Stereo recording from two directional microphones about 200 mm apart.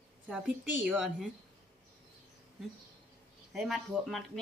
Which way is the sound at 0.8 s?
Centre (ahead or behind).